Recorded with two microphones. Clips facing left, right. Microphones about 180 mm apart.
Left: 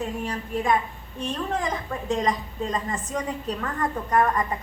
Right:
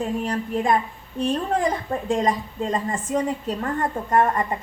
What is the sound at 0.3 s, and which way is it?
A woman's voice, 35° right (ahead or behind).